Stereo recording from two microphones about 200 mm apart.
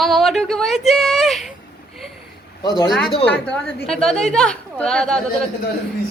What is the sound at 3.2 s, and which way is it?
A woman's voice, 5° left (ahead or behind).